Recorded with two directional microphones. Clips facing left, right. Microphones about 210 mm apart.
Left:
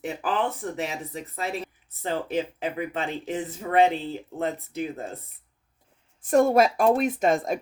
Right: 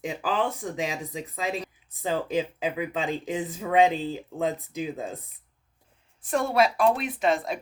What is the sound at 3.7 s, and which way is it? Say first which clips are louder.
Speech: even; 15° right (ahead or behind).